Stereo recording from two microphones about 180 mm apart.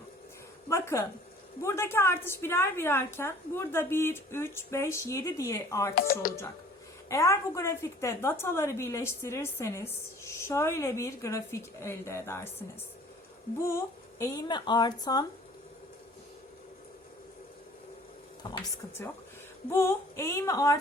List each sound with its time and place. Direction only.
0.7 s a woman's voice: 15° left (ahead or behind)
5.9 s speech: 55° left (ahead or behind)
7.1 s a woman's voice: 15° left (ahead or behind)
13.6 s speech: 15° left (ahead or behind)
18.4 s a sound: 25° left (ahead or behind)
19.7 s a woman's voice: 15° left (ahead or behind)